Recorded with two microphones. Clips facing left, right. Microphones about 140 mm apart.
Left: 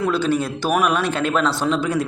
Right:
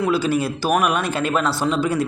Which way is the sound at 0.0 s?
5° right (ahead or behind).